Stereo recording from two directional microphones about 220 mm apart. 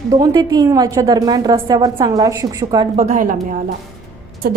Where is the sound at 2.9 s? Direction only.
35° right (ahead or behind).